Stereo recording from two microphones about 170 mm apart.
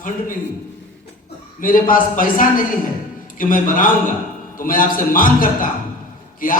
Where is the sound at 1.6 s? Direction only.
55° left (ahead or behind).